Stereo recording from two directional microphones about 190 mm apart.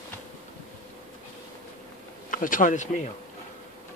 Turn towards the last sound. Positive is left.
turn(degrees=40)  # may be behind; listen again after turning